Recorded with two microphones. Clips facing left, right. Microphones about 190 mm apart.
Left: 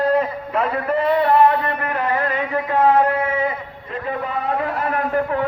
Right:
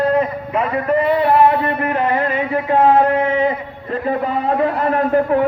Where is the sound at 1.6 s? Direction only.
20° right (ahead or behind).